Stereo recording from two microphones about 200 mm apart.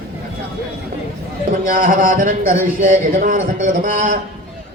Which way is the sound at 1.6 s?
40° right (ahead or behind).